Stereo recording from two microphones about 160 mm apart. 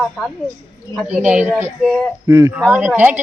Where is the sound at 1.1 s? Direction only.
10° right (ahead or behind).